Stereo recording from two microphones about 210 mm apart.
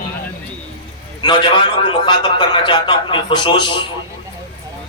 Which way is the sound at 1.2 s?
25° left (ahead or behind).